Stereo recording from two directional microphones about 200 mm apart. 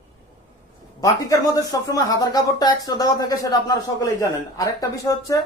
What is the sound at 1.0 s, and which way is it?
A woman's voice, 15° left (ahead or behind).